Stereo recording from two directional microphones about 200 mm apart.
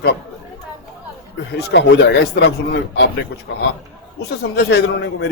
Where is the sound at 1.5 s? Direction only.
60° left (ahead or behind).